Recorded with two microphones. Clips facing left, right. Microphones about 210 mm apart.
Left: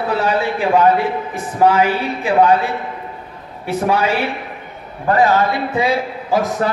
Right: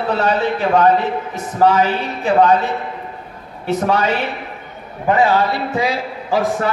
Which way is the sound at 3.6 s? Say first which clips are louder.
Even; 10° left (ahead or behind).